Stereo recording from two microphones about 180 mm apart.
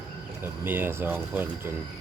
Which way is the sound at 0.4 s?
10° right (ahead or behind).